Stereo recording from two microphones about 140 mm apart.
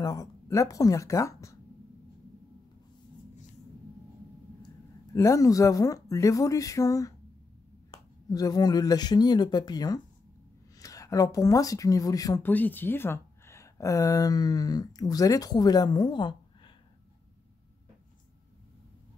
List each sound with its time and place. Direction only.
0.0 s speech: 25° left (ahead or behind)
5.1 s speech: 20° left (ahead or behind)
12.4 s speech: 15° left (ahead or behind); by 16.7 s 35° left (ahead or behind)